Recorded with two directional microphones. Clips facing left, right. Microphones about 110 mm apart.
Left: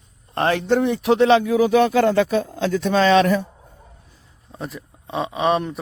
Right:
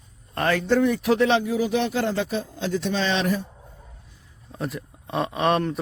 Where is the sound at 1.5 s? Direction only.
50° left (ahead or behind).